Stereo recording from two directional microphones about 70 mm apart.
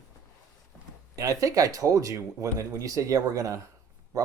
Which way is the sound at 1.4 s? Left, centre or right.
Right.